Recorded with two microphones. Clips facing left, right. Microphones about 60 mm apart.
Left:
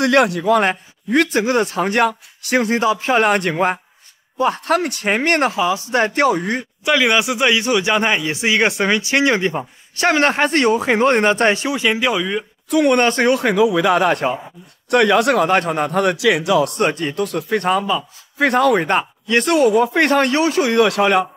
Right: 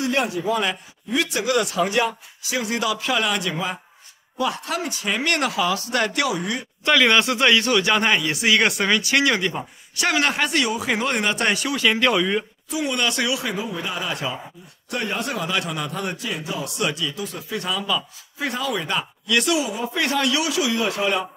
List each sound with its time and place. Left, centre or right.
0.0 s speech: left
0.7 s speech: left
1.4 s speech: left
2.7 s speech: left
6.8 s speech: centre
12.0 s speech: centre
12.6 s speech: left
13.0 s speech: left
13.6 s speech: left
14.9 s speech: left
16.7 s speech: left